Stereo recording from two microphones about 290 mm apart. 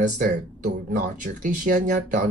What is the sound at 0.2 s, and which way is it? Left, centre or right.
Speech, right.